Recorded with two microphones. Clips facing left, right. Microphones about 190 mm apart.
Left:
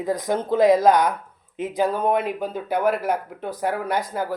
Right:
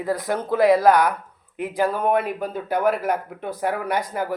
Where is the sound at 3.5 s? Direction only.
Centre (ahead or behind).